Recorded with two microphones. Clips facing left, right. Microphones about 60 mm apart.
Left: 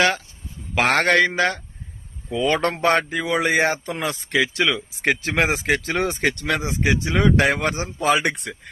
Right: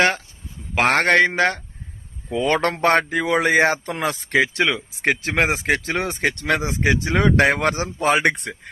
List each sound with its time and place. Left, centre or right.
0.8 s speech: centre
1.0 s speech: right
2.6 s speech: right
4.0 s speech: right
4.7 s speech: centre
5.8 s speech: right
6.4 s speech: right
7.5 s speech: right
7.9 s speech: right